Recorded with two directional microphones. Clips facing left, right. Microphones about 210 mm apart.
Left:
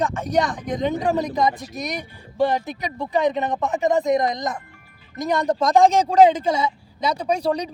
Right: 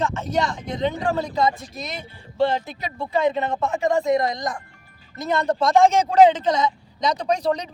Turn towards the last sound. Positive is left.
turn(degrees=10)  # may be behind; listen again after turning